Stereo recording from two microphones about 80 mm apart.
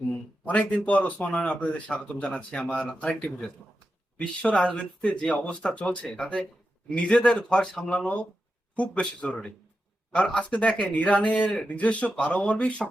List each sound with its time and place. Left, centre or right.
0.1 s speech: centre